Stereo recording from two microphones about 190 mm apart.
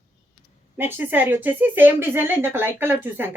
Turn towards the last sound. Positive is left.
turn(degrees=-10)  # may be behind; listen again after turning